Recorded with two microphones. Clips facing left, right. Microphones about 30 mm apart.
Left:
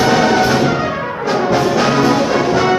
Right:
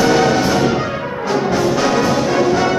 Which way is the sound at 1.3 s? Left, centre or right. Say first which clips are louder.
Left 2 dB; left.